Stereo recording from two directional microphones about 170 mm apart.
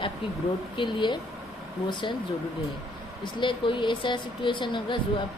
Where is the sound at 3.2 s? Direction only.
30° left (ahead or behind).